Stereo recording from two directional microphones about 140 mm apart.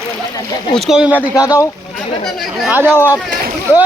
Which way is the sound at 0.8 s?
5° right (ahead or behind).